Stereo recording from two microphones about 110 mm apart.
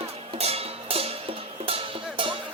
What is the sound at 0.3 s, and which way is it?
Music, 65° right (ahead or behind).